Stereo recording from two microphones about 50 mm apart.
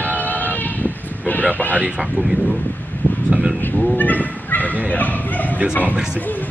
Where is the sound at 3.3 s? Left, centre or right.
Right.